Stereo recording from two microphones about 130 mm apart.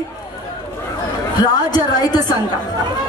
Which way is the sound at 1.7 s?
30° left (ahead or behind).